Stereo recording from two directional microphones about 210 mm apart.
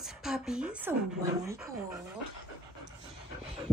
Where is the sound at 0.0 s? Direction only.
Centre (ahead or behind).